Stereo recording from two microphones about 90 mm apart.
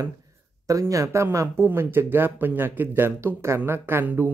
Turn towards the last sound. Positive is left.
turn(degrees=-25)  # may be behind; listen again after turning